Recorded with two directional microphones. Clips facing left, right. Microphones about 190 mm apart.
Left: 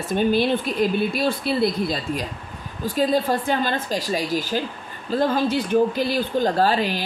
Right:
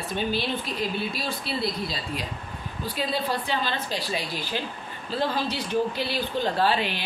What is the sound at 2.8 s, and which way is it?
Speech, 45° left (ahead or behind).